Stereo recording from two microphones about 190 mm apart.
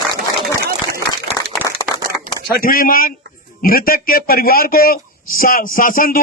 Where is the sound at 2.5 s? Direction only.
50° left (ahead or behind).